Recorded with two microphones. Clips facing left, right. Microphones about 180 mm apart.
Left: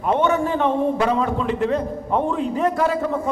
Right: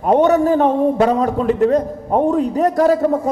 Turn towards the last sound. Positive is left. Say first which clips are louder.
# right 7 dB
turn(degrees=-40)  # may be behind; listen again after turning